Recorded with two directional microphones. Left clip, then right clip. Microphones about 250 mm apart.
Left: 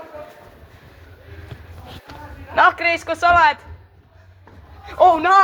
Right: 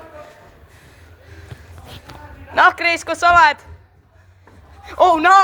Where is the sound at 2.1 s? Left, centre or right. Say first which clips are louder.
Even; right.